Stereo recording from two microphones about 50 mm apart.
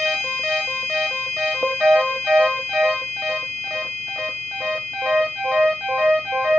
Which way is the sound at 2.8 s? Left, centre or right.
Centre.